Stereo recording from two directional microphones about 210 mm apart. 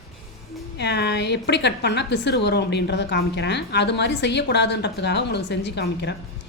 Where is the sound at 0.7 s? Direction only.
50° left (ahead or behind).